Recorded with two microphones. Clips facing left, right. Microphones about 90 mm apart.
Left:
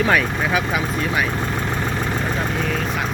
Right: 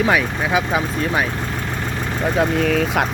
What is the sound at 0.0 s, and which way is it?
Speech, 15° right (ahead or behind).